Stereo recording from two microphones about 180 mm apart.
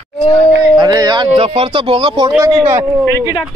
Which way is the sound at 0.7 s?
20° right (ahead or behind).